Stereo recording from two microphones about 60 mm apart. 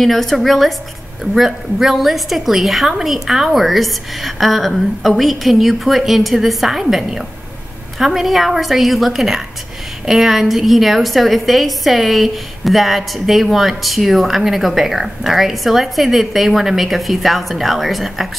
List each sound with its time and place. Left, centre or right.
0.0 s a woman's voice: centre